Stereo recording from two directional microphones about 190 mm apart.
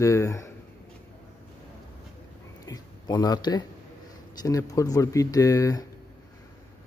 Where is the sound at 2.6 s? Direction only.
20° left (ahead or behind).